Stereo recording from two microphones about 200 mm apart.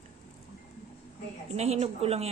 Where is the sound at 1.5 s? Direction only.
30° right (ahead or behind).